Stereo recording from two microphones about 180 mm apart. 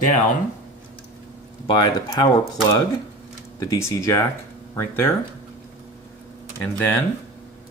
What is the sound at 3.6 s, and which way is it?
Speech, 15° left (ahead or behind).